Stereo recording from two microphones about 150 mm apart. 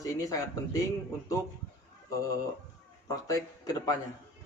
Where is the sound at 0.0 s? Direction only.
20° left (ahead or behind).